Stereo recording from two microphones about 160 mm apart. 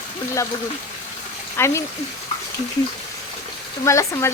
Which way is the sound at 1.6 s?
15° left (ahead or behind).